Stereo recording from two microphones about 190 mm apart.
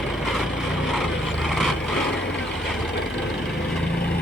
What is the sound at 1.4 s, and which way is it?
Vehicle, centre (ahead or behind).